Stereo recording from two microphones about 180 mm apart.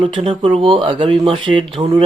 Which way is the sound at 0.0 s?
30° right (ahead or behind).